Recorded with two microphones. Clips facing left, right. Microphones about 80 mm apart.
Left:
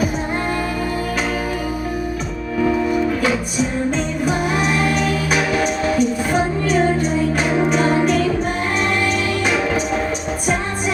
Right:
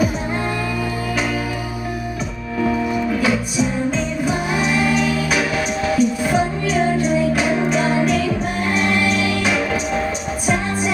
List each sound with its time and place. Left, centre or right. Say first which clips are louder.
4.5 s music: even; left
7.3 s music: left 1 dB; centre